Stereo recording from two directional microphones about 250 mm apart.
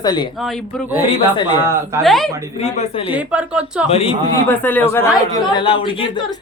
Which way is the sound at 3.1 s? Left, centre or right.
Centre.